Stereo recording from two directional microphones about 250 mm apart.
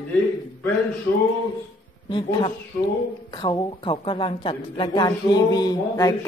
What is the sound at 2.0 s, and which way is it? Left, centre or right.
A woman's voice, centre.